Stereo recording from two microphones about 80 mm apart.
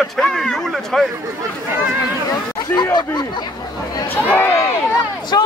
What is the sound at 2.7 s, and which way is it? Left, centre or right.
Speech, left.